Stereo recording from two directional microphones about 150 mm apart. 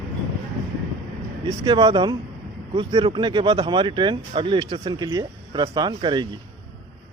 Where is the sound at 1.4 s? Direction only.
30° right (ahead or behind).